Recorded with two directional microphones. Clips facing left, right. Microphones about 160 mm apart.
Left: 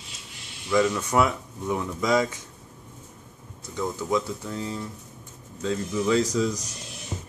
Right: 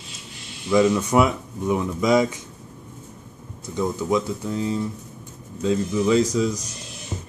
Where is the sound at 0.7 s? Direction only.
15° right (ahead or behind).